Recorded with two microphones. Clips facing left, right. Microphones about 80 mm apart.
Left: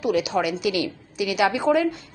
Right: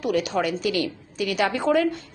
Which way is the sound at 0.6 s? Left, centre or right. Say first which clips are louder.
Left 1 dB; right.